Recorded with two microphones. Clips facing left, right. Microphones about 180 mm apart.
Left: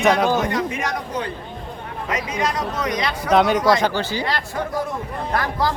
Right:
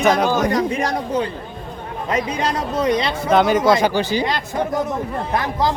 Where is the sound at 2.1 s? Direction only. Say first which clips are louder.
Right 3 dB; 30° right (ahead or behind).